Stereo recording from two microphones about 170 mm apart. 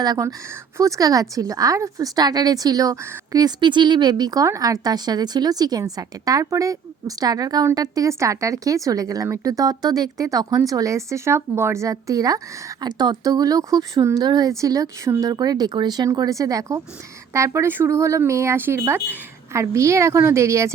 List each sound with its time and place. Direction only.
0.0 s speech: 20° right (ahead or behind)